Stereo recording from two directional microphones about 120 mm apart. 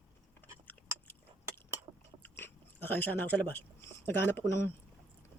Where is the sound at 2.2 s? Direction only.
20° left (ahead or behind).